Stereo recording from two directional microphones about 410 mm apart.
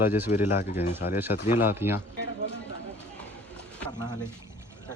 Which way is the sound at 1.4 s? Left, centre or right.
Left.